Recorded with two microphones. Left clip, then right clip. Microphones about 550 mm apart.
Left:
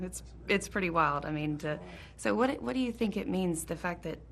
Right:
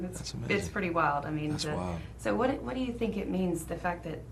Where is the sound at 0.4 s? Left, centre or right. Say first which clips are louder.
Left 1 dB; left.